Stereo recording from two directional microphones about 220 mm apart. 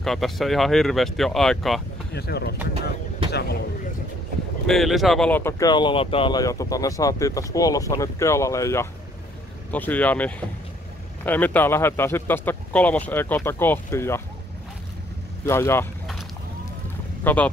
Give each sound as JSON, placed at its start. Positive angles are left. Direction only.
{"t": 0.0, "sound": "speech", "side_deg": 0}
{"t": 2.1, "sound": "speech", "side_deg": 45}
{"t": 4.6, "sound": "speech", "side_deg": 0}
{"t": 15.4, "sound": "speech", "side_deg": 10}
{"t": 17.2, "sound": "speech", "side_deg": 10}